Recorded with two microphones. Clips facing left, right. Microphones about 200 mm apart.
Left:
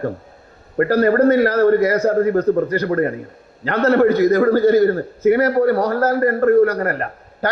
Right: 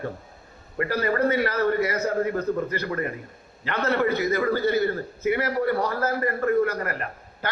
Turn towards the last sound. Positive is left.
turn(degrees=45)  # may be behind; listen again after turning